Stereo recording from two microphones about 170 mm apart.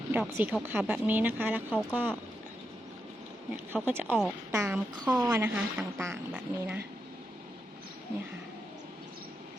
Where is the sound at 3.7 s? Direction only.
10° right (ahead or behind).